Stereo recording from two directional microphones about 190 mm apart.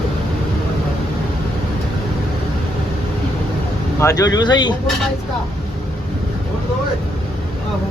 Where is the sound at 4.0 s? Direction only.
15° left (ahead or behind).